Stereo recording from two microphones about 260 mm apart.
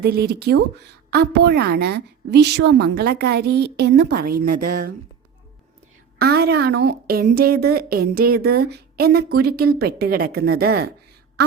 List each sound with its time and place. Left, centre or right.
0.0 s a woman's voice: right
4.6 s speech: right
6.1 s a woman's voice: right
11.4 s a sound: right